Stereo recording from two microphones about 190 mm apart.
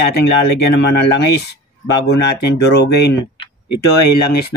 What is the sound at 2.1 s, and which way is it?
Speech, 60° left (ahead or behind).